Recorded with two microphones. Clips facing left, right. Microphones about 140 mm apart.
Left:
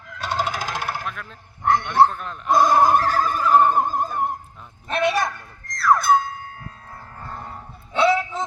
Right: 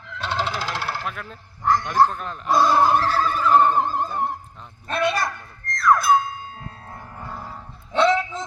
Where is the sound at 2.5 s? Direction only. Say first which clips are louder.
Left 1 dB; 15° left (ahead or behind).